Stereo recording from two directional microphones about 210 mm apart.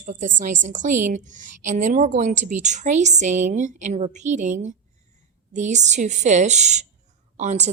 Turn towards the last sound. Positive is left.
turn(degrees=-35)  # may be behind; listen again after turning